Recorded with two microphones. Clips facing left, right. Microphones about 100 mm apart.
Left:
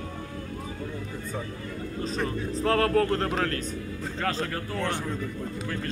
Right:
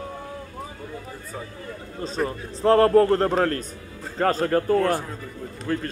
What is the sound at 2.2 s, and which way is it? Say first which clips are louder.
Speech: right 7 dB; 30° right (ahead or behind).